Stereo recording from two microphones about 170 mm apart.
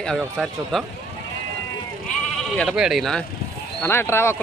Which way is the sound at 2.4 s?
Centre (ahead or behind).